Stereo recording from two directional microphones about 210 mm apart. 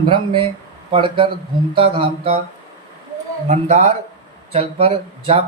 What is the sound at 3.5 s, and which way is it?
A man's voice, 35° right (ahead or behind).